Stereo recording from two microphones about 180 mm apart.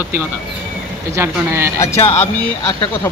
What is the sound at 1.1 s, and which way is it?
Speech, 15° right (ahead or behind).